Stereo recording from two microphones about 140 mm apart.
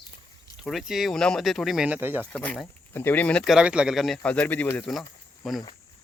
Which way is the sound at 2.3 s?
10° left (ahead or behind).